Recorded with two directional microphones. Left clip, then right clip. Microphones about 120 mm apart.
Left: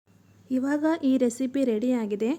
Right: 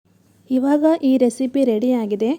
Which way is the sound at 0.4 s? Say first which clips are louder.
Right 9 dB; 45° right (ahead or behind).